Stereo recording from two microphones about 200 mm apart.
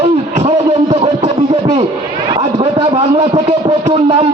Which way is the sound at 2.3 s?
25° right (ahead or behind).